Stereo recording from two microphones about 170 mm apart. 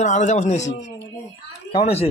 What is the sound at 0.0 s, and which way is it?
Speech, 45° left (ahead or behind).